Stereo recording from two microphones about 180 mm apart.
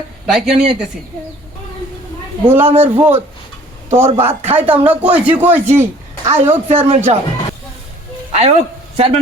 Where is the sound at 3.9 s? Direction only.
15° right (ahead or behind).